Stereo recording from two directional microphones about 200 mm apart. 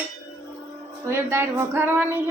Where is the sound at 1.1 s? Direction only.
15° right (ahead or behind).